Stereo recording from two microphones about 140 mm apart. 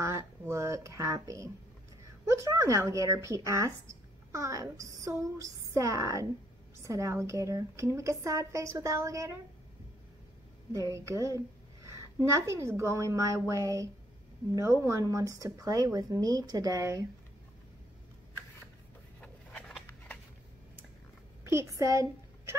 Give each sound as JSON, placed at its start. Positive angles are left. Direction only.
{"t": 0.0, "sound": "a woman's voice", "side_deg": -20}
{"t": 10.7, "sound": "a woman's voice", "side_deg": -20}
{"t": 19.2, "sound": "a sound", "side_deg": 10}
{"t": 21.5, "sound": "a woman's voice", "side_deg": -20}